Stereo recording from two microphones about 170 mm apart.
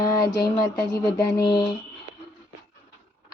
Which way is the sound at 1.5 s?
25° left (ahead or behind).